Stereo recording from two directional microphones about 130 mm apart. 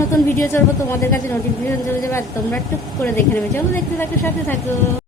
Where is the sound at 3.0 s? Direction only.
15° left (ahead or behind).